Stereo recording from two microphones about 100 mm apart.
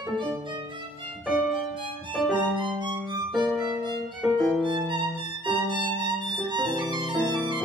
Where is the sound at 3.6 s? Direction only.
50° right (ahead or behind).